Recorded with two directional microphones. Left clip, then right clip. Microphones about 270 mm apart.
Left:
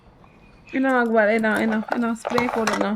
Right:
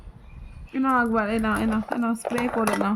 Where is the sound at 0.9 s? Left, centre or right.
Right.